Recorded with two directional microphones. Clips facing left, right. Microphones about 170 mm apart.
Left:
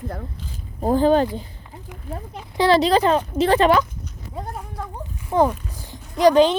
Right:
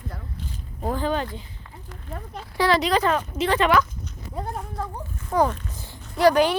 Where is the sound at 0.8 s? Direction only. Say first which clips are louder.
Left 9 dB; 30° left (ahead or behind).